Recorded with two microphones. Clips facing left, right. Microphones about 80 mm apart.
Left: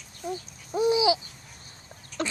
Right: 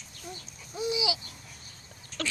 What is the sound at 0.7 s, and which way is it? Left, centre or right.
Babbling, left.